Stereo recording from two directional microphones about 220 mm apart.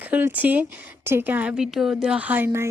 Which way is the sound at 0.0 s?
10° right (ahead or behind).